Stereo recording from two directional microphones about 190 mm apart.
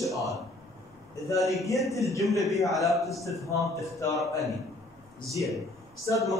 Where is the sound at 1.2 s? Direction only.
15° left (ahead or behind).